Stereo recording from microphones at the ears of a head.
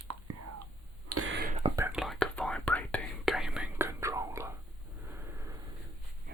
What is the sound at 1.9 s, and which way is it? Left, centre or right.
Whispering, centre.